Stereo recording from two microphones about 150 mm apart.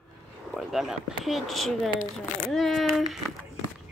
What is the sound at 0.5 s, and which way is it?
Speech, 5° right (ahead or behind).